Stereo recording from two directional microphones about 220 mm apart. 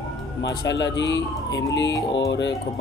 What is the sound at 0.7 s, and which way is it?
Speech, 55° left (ahead or behind).